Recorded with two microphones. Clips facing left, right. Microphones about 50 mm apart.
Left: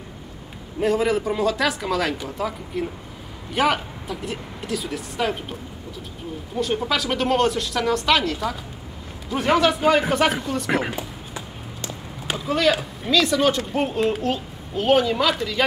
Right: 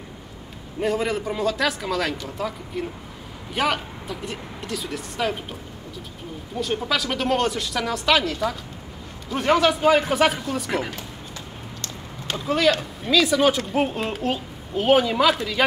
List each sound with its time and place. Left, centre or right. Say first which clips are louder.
0.7 s speech: left 3 dB; centre
10.7 s a sound: left 3 dB; centre
12.4 s speech: even; centre